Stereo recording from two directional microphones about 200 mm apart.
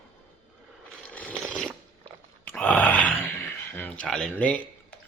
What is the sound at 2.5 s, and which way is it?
Wail, 5° left (ahead or behind).